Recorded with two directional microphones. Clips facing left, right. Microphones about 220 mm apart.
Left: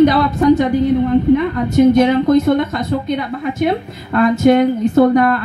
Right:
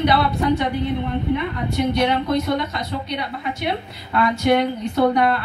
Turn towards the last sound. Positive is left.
turn(degrees=45)  # may be behind; listen again after turning